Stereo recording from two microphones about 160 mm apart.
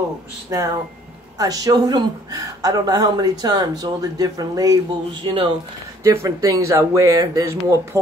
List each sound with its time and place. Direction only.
0.5 s speech: 20° right (ahead or behind)
6.0 s speech: 20° right (ahead or behind)